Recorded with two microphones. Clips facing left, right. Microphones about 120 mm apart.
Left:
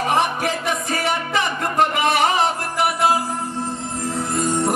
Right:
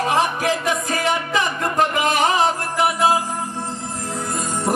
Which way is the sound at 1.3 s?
Centre (ahead or behind).